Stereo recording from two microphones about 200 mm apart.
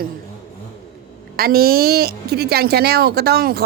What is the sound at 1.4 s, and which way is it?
A woman's voice, 50° right (ahead or behind).